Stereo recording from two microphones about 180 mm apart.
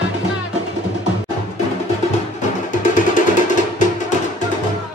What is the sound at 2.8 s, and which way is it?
Music, 45° left (ahead or behind).